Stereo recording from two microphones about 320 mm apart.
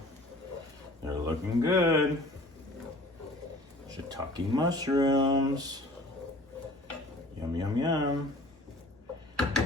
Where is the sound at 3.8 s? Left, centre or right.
Centre.